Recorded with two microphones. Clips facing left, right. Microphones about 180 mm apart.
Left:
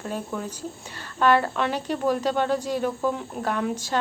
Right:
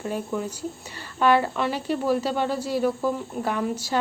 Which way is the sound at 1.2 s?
10° right (ahead or behind).